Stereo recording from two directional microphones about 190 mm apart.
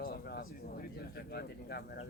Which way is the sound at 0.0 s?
55° left (ahead or behind).